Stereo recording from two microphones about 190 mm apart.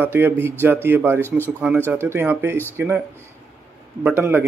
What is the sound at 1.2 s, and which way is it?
Speech, 10° left (ahead or behind).